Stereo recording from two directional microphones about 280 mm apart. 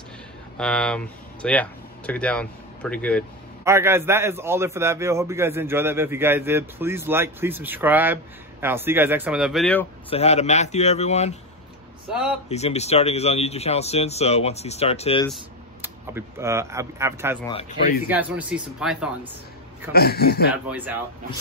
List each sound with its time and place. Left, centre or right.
0.6 s speech: centre
3.6 s a man's voice: centre
10.0 s speech: left
12.1 s speech: centre
12.4 s speech: left
15.2 s speech: centre
17.5 s speech: left
18.0 s speech: centre
19.9 s a man's voice: left
20.5 s speech: centre